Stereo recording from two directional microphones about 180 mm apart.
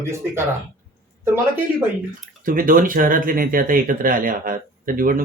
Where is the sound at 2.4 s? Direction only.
50° right (ahead or behind).